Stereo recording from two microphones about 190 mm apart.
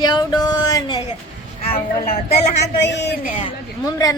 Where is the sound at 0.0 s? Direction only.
20° left (ahead or behind).